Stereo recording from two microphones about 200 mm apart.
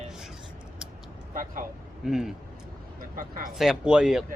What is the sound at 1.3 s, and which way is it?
Speech, 40° right (ahead or behind).